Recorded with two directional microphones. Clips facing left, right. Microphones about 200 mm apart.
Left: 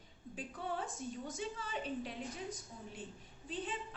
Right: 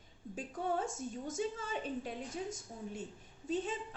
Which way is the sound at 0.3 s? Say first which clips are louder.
Right 5 dB; 45° right (ahead or behind).